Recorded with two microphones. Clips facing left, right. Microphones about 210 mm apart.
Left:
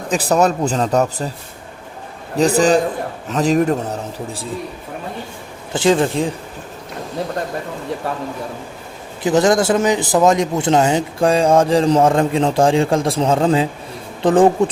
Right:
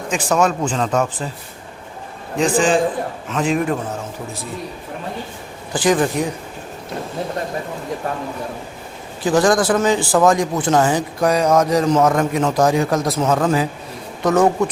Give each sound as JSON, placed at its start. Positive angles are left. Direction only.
{"t": 0.1, "sound": "speech", "side_deg": 35}
{"t": 2.3, "sound": "speech", "side_deg": 40}
{"t": 5.7, "sound": "a man's voice", "side_deg": 25}
{"t": 9.2, "sound": "a man's voice", "side_deg": 25}